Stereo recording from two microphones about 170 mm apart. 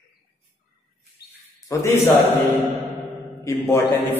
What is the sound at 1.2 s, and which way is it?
Bird, 70° left (ahead or behind).